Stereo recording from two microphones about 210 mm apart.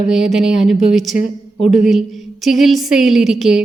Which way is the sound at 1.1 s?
30° left (ahead or behind).